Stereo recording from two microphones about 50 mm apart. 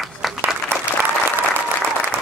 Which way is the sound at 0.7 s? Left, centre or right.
Right.